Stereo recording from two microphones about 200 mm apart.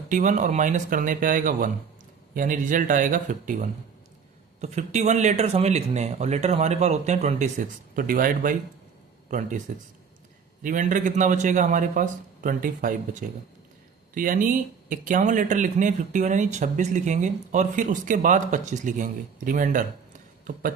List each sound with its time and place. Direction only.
0.1 s speech: 40° right (ahead or behind)